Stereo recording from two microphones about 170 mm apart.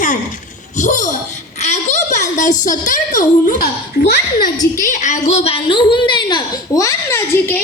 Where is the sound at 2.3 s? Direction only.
45° left (ahead or behind).